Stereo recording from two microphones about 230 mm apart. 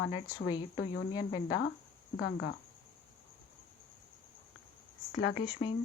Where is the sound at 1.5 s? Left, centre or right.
Left.